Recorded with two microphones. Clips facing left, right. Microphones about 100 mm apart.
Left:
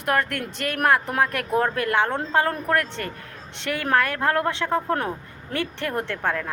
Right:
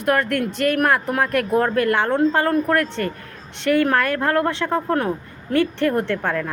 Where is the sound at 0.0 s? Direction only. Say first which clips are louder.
Right 4 dB; 20° left (ahead or behind).